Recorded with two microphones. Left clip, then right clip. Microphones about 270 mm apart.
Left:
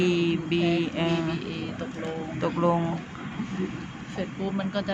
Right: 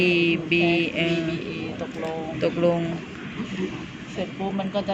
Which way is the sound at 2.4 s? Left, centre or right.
Centre.